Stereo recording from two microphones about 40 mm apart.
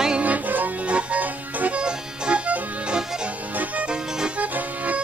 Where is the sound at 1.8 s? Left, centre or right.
Right.